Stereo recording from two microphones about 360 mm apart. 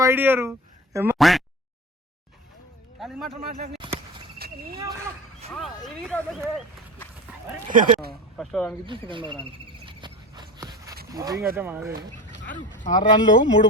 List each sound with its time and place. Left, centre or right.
0.0 s speech: centre
3.0 s a man's voice: centre
3.8 s a sound: centre
4.4 s cricket: right
5.5 s speech: centre
7.7 s speech: right
8.4 s speech: centre
8.9 s speech: centre
9.8 s a sound: centre
11.1 s speech: centre
12.8 s speech: left